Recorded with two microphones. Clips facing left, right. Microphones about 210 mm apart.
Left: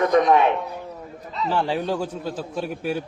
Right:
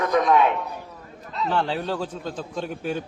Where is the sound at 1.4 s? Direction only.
10° left (ahead or behind).